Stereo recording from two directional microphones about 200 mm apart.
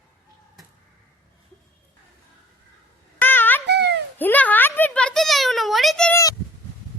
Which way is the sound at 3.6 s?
55° right (ahead or behind).